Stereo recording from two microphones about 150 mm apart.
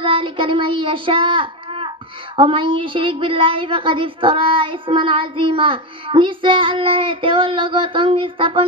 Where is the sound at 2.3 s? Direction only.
35° right (ahead or behind).